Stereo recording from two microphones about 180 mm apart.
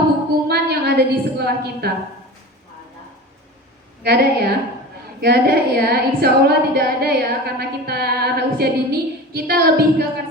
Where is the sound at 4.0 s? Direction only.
65° right (ahead or behind).